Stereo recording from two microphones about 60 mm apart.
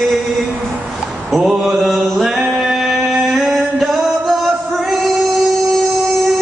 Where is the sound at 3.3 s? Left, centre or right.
Centre.